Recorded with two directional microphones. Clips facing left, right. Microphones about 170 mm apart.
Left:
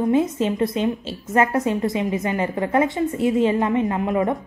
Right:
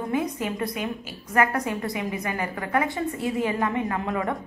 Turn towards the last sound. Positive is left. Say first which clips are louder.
# left 6 dB
turn(degrees=20)  # may be behind; listen again after turning